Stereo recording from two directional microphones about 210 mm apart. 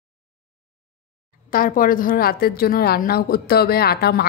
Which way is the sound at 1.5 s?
40° left (ahead or behind).